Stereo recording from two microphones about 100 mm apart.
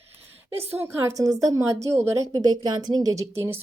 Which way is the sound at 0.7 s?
20° right (ahead or behind).